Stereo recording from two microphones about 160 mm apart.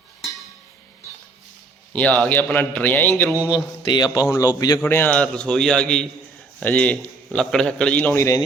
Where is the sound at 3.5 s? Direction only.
25° left (ahead or behind).